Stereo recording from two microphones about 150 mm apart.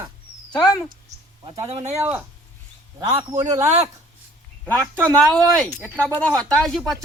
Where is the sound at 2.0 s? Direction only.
10° right (ahead or behind).